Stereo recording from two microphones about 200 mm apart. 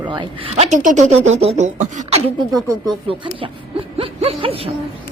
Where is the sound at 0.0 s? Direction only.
25° right (ahead or behind).